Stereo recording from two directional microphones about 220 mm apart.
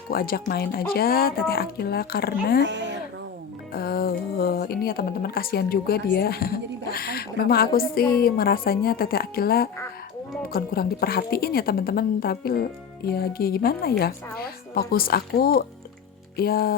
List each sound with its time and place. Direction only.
0.1 s a woman's voice: 40° left (ahead or behind)
3.7 s music: 40° left (ahead or behind)
6.1 s a woman's voice: 45° left (ahead or behind)